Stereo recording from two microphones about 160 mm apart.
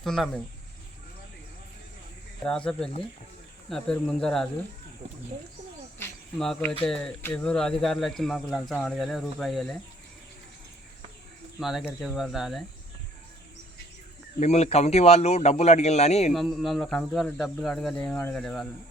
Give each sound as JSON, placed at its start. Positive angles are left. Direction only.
{"t": 0.0, "sound": "speech", "side_deg": 0}
{"t": 2.4, "sound": "speech", "side_deg": 5}
{"t": 6.4, "sound": "speech", "side_deg": 5}
{"t": 11.6, "sound": "speech", "side_deg": 0}
{"t": 14.3, "sound": "a man's voice", "side_deg": 45}
{"t": 16.3, "sound": "speech", "side_deg": 0}